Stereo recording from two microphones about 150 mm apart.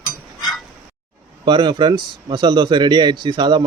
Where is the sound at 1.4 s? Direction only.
30° right (ahead or behind).